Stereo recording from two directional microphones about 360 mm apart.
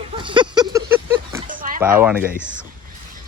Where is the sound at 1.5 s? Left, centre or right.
Right.